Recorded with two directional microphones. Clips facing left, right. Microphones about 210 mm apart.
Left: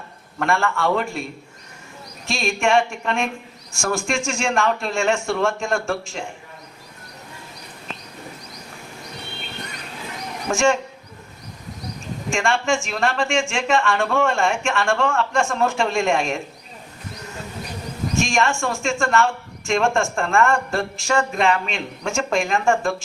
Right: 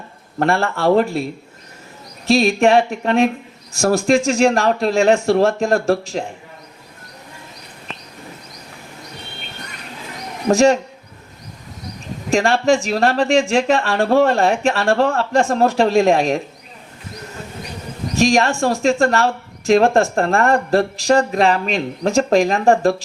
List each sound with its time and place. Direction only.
0.3 s speech: 35° right (ahead or behind)
10.5 s speech: 35° right (ahead or behind)
12.3 s speech: 35° right (ahead or behind)
18.2 s speech: 35° right (ahead or behind)